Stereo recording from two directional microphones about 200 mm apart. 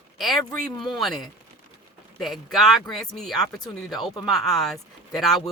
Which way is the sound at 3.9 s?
20° left (ahead or behind).